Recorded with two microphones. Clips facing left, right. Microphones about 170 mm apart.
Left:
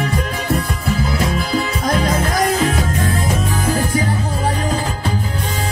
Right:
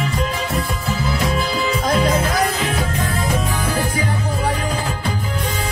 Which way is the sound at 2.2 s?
45° left (ahead or behind).